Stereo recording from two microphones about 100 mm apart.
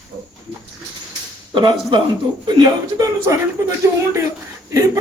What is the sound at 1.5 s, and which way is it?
A man's voice, 50° right (ahead or behind).